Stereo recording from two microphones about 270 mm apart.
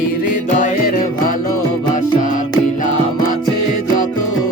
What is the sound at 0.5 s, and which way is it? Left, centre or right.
Music, left.